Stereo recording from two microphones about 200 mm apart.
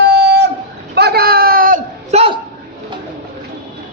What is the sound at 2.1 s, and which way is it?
Speech, 30° right (ahead or behind).